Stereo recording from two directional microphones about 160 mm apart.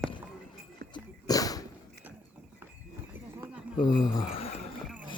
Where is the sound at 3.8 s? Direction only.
25° left (ahead or behind).